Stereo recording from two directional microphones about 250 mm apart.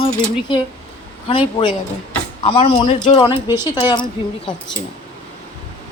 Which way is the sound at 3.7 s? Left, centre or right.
Centre.